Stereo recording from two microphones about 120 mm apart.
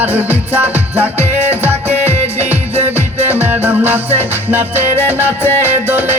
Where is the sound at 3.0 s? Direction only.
15° right (ahead or behind).